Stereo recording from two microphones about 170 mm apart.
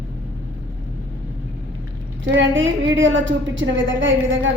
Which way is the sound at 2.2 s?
90° right.